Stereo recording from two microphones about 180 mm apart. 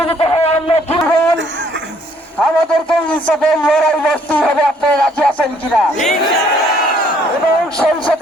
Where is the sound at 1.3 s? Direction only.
85° right.